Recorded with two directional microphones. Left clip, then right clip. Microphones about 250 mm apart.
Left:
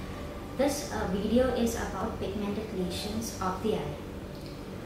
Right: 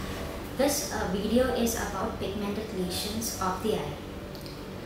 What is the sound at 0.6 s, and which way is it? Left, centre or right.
A woman's voice, centre.